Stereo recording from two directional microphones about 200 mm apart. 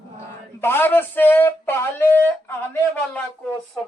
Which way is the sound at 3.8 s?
5° left (ahead or behind).